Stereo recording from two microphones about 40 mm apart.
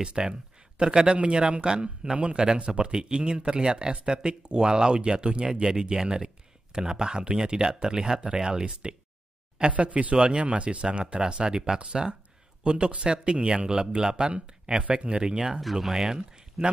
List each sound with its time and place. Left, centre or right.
0.0 s speech: right
9.7 s speech: right
10.1 s speech: right
15.6 s speech: centre